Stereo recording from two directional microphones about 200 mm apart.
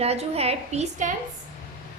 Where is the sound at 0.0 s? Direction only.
30° right (ahead or behind).